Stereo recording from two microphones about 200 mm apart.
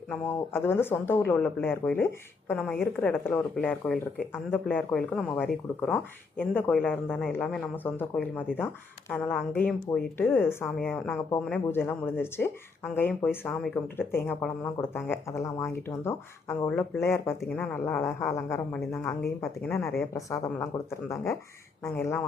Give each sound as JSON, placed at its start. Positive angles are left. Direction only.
{"t": 0.1, "sound": "speech", "side_deg": 10}